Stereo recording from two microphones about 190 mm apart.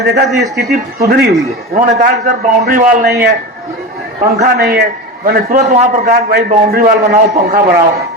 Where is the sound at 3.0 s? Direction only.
55° right (ahead or behind).